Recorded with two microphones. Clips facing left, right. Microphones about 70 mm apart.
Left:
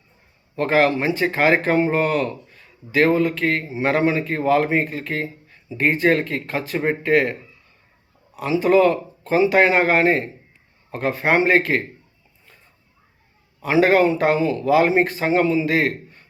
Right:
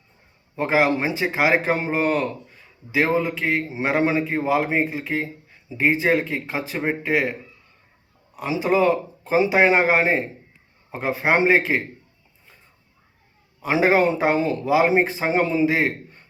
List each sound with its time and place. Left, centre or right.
0.5 s speech: centre
8.4 s speech: centre
13.6 s speech: centre
14.3 s speech: right
14.7 s speech: centre